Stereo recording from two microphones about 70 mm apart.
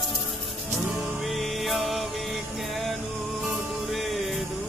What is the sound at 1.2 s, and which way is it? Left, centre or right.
Music, centre.